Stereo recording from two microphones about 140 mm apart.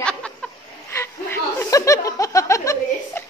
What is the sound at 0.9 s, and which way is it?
Chuckle, 15° left (ahead or behind).